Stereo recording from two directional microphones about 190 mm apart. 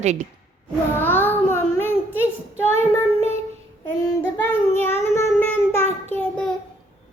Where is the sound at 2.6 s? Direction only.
15° left (ahead or behind).